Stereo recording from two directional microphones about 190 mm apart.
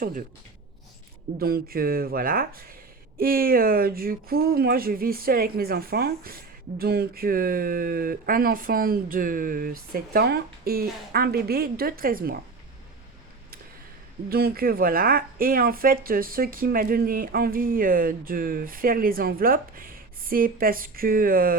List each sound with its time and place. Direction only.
0.0 s speech: 45° right (ahead or behind)
1.4 s speech: 55° right (ahead or behind)
14.3 s speech: 55° right (ahead or behind)